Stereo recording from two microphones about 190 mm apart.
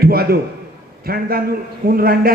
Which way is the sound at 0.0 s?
55° right (ahead or behind).